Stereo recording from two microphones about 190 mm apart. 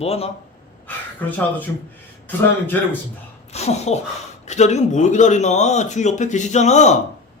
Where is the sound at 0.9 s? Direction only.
10° left (ahead or behind).